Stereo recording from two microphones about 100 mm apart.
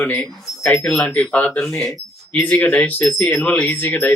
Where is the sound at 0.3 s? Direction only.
Centre (ahead or behind).